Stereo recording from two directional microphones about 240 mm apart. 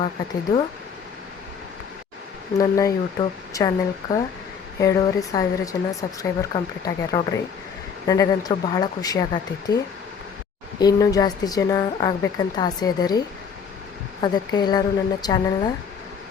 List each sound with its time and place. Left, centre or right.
2.6 s speech: centre
10.8 s speech: centre